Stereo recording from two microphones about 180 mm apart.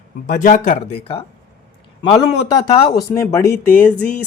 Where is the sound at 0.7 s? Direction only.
30° left (ahead or behind).